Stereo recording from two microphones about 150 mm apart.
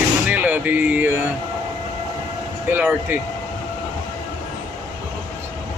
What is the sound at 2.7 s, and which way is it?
Speech, 10° right (ahead or behind).